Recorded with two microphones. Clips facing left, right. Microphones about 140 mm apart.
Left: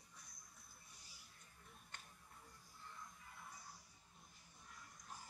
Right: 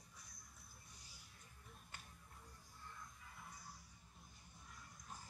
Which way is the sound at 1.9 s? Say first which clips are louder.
Even; 5° right (ahead or behind).